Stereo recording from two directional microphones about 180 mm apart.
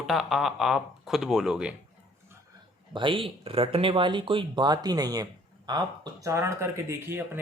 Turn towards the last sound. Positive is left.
turn(degrees=-15)  # may be behind; listen again after turning